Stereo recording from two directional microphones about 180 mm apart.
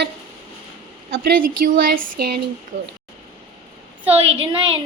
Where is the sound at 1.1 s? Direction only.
55° right (ahead or behind).